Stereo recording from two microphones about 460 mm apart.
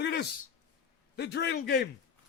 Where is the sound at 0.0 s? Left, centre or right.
Left.